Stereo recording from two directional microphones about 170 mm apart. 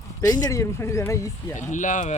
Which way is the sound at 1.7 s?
45° left (ahead or behind).